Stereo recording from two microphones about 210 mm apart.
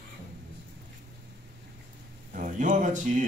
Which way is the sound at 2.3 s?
35° right (ahead or behind).